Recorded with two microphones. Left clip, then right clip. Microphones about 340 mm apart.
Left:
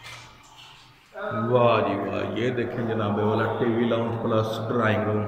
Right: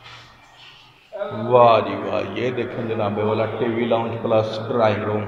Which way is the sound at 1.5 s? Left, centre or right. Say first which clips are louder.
Right 7 dB; centre.